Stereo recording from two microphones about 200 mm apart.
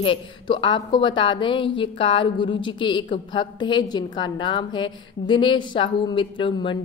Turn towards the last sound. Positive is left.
turn(degrees=25)  # may be behind; listen again after turning